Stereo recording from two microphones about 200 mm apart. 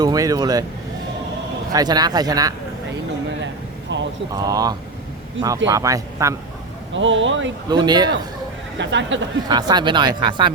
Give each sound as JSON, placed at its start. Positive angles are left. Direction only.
{"t": 0.0, "sound": "speech", "side_deg": -20}
{"t": 1.7, "sound": "speech", "side_deg": -20}
{"t": 3.9, "sound": "speech", "side_deg": -65}
{"t": 4.3, "sound": "speech", "side_deg": -20}
{"t": 6.9, "sound": "speech", "side_deg": -70}
{"t": 7.7, "sound": "speech", "side_deg": -20}
{"t": 8.8, "sound": "speech", "side_deg": -65}
{"t": 9.5, "sound": "speech", "side_deg": -20}